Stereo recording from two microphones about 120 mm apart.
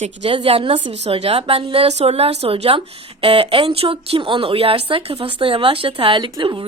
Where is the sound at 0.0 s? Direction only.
55° right (ahead or behind).